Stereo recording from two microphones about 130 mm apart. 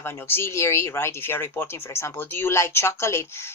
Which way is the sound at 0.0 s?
20° left (ahead or behind).